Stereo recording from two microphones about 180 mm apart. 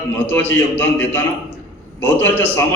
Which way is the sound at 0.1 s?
10° left (ahead or behind).